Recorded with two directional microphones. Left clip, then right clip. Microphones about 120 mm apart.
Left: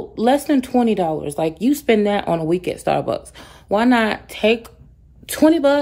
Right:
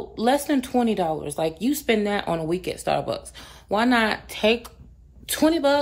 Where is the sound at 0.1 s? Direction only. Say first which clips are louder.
Left 5 dB; 25° left (ahead or behind).